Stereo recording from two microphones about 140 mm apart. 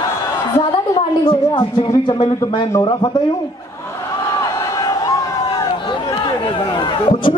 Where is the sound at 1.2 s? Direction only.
35° left (ahead or behind).